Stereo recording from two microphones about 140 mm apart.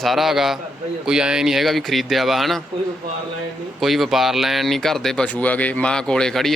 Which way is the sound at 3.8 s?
Centre (ahead or behind).